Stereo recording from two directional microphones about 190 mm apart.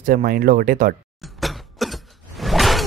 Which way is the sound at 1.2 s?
Centre (ahead or behind).